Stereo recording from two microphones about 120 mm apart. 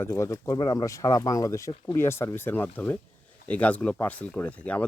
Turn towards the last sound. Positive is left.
turn(degrees=10)  # may be behind; listen again after turning